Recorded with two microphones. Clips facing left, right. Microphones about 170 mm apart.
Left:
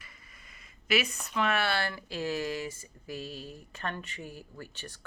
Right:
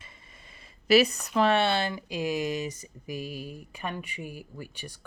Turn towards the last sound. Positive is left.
turn(degrees=-10)  # may be behind; listen again after turning